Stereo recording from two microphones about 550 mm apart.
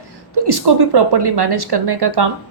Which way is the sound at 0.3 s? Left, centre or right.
Right.